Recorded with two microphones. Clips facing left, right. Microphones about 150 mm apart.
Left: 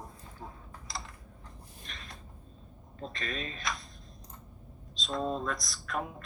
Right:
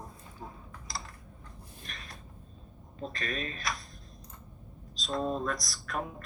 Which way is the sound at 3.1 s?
25° left (ahead or behind).